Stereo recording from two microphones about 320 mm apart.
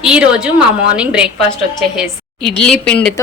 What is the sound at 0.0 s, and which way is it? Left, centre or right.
A woman's voice, centre.